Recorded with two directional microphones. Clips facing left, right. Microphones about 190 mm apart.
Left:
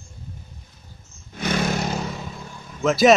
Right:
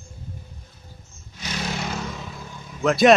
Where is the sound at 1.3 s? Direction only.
55° left (ahead or behind).